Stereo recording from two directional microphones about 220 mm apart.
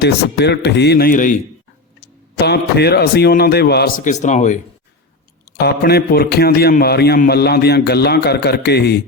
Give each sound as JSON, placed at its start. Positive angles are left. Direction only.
{"t": 0.0, "sound": "a man's voice", "side_deg": 50}
{"t": 2.0, "sound": "a man's voice", "side_deg": 50}
{"t": 5.5, "sound": "a man's voice", "side_deg": 45}